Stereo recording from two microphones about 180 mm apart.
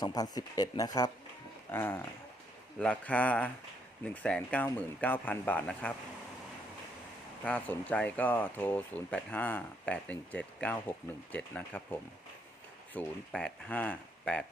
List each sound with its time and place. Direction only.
0.0 s speech: 20° left (ahead or behind)
7.4 s speech: 10° left (ahead or behind)